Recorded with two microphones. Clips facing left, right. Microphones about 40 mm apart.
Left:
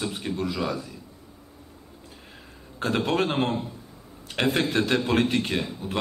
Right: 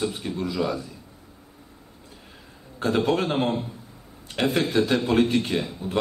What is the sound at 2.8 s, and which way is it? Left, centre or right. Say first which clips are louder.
Speech: right 2 dB; left.